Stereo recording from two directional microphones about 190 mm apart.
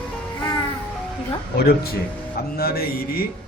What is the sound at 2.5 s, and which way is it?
Speech, 55° left (ahead or behind).